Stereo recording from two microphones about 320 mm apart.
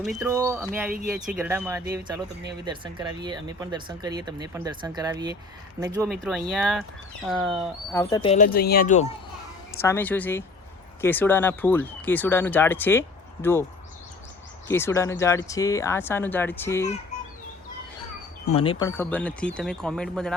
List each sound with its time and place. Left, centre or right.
0.0 s speech: centre
6.1 s speech: centre
8.1 s speech: centre
9.8 s speech: centre
14.7 s speech: centre
18.4 s speech: centre